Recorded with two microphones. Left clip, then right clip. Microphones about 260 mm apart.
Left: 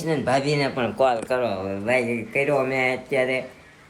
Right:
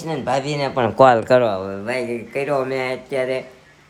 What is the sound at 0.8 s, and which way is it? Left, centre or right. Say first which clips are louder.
Speech: right 12 dB; right.